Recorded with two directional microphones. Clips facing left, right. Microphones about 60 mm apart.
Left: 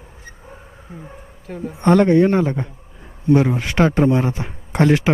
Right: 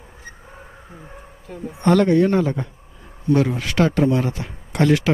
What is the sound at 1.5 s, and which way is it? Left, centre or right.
Speech, left.